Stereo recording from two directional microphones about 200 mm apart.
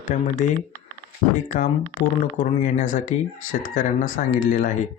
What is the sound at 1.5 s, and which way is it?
Speech, 40° left (ahead or behind).